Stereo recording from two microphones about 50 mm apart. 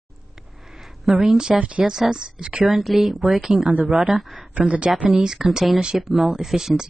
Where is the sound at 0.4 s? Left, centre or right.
Centre.